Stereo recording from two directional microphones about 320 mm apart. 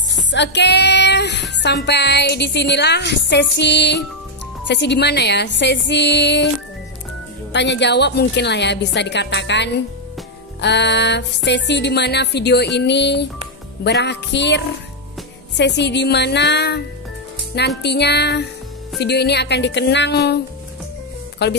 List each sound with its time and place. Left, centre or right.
0.3 s music: left
7.5 s music: left
21.4 s music: left